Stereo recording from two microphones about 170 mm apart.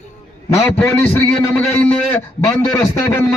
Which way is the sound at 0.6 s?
15° left (ahead or behind).